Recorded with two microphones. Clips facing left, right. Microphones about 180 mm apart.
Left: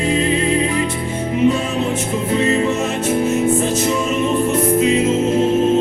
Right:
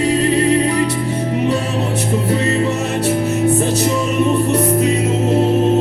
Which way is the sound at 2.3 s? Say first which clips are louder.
Left 2 dB; 35° right (ahead or behind).